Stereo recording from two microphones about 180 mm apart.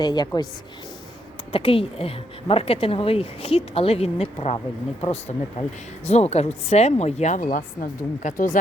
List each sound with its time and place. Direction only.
0.0 s a woman's voice: 25° left (ahead or behind)
1.5 s a woman's voice: 30° left (ahead or behind)